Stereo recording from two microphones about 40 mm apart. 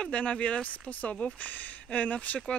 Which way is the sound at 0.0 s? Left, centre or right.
Left.